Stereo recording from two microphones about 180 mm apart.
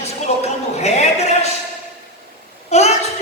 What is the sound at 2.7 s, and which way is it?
Speech, 35° left (ahead or behind).